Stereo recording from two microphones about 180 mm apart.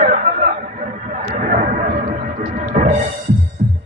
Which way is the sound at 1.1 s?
45° right (ahead or behind).